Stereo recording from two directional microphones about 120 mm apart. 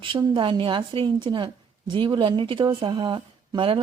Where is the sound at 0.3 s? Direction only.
45° right (ahead or behind).